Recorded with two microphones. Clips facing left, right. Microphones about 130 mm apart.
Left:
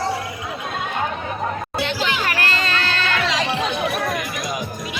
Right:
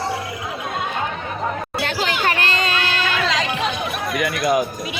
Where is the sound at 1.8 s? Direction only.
45° right (ahead or behind).